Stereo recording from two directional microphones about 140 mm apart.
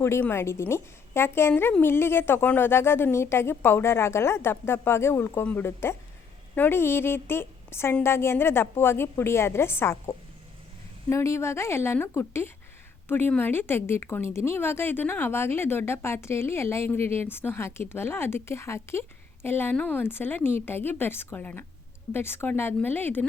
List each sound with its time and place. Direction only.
0.0 s a woman's voice: 15° left (ahead or behind)